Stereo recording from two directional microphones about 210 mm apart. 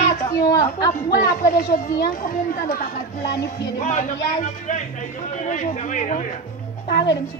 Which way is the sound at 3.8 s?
35° left (ahead or behind).